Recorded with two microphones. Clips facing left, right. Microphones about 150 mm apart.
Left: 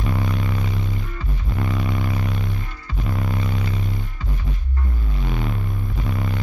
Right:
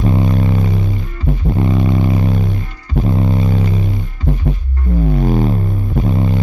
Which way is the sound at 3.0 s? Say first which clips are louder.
Right 10 dB; 25° right (ahead or behind).